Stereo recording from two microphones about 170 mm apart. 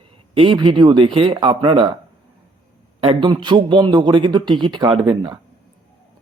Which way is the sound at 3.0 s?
30° right (ahead or behind).